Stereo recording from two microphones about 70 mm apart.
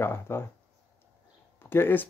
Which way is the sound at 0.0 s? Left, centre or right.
Left.